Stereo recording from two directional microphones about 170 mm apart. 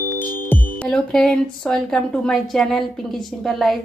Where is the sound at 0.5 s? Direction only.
5° left (ahead or behind).